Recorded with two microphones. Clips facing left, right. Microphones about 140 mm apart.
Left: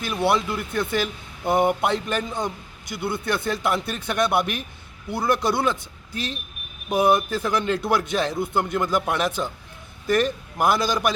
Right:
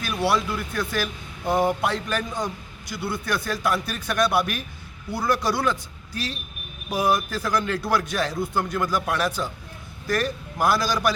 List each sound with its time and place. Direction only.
0.0 s speech: 20° left (ahead or behind)
6.9 s speech: 20° left (ahead or behind)